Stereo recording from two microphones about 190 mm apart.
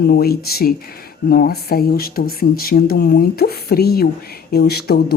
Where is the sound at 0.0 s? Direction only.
55° left (ahead or behind).